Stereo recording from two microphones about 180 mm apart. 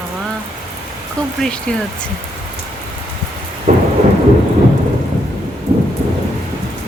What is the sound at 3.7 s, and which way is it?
Thunder, 40° right (ahead or behind).